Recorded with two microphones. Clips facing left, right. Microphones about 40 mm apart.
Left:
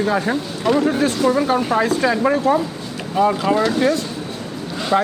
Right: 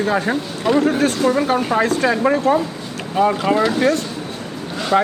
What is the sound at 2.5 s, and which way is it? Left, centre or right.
Speech, right.